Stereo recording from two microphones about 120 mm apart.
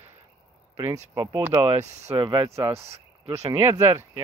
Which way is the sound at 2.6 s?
20° right (ahead or behind).